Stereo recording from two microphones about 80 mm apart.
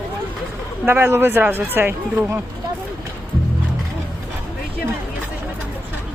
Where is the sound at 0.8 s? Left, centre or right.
Right.